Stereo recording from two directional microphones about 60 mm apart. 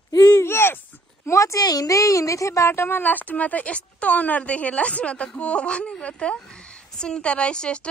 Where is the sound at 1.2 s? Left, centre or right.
Left.